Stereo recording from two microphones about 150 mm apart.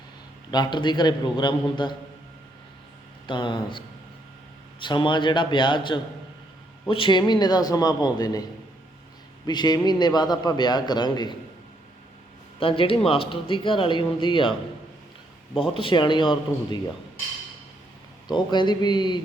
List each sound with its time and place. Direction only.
0.5 s speech: 30° left (ahead or behind)
3.2 s a man's voice: 30° left (ahead or behind)
9.5 s a man's voice: 30° left (ahead or behind)
12.5 s speech: 35° left (ahead or behind)
15.5 s speech: 35° left (ahead or behind)
18.3 s a man's voice: 30° left (ahead or behind)